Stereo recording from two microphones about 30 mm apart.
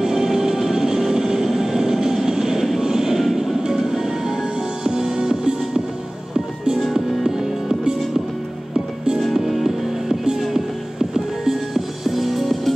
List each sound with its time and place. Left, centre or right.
0.0 s music: centre
2.8 s a sound: centre
3.2 s music: centre
6.9 s music: centre
9.3 s music: centre
11.0 s music: centre
11.7 s music: centre